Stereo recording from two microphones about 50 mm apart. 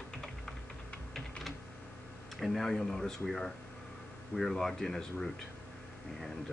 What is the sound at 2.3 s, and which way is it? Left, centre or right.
Speech, centre.